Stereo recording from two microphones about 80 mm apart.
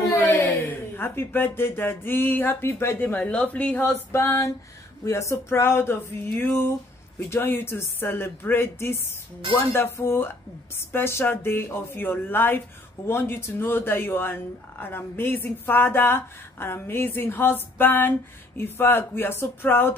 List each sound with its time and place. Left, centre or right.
0.1 s speech: left